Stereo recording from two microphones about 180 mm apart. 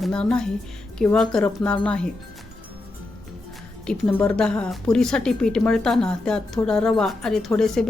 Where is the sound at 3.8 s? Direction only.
5° left (ahead or behind).